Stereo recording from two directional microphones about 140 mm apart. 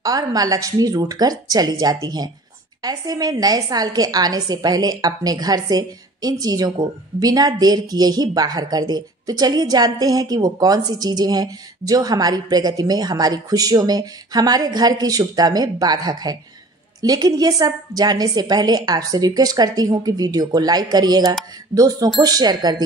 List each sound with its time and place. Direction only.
0.0 s a woman's voice: 25° right (ahead or behind)